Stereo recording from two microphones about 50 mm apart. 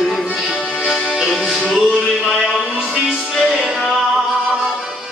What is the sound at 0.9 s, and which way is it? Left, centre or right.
Music, centre.